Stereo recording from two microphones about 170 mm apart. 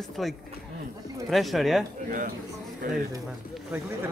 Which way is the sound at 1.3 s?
Centre (ahead or behind).